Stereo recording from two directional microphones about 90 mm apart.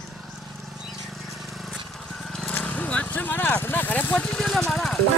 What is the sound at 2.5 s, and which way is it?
Vehicle, 15° left (ahead or behind).